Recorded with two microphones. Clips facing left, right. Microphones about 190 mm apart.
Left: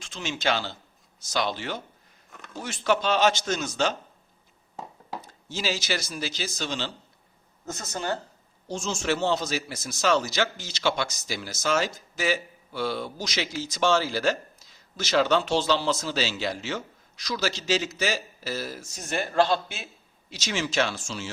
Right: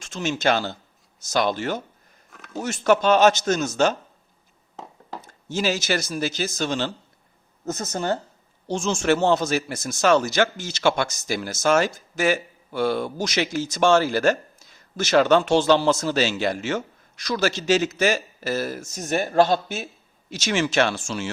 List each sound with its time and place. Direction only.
0.0 s a man's voice: 45° right (ahead or behind)
5.2 s a man's voice: 50° right (ahead or behind)
8.6 s speech: 80° right
9.0 s a man's voice: 50° right (ahead or behind)
20.3 s speech: 55° right (ahead or behind)